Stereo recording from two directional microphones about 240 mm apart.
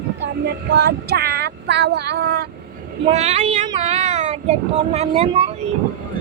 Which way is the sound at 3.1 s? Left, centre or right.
Right.